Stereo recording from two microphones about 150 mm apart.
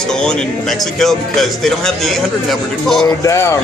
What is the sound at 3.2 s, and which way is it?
Speech, 20° left (ahead or behind).